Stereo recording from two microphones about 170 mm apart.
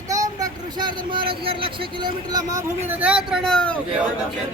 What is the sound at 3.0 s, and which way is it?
Speech, 5° right (ahead or behind).